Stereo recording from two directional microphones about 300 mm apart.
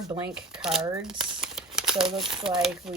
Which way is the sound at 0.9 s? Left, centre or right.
Centre.